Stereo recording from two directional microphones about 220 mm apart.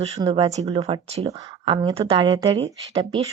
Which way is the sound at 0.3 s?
30° right (ahead or behind).